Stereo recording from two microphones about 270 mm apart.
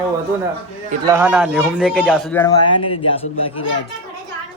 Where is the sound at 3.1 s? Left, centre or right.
Left.